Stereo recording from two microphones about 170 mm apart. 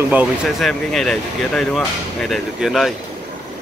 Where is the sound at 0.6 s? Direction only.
Centre (ahead or behind).